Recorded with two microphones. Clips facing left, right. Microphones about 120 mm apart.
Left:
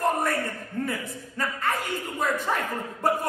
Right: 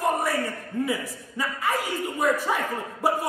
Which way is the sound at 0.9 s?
5° right (ahead or behind).